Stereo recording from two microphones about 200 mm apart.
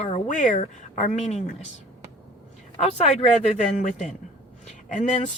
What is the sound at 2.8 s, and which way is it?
Speech, 35° left (ahead or behind).